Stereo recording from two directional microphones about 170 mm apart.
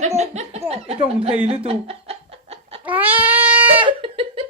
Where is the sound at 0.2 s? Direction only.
40° right (ahead or behind).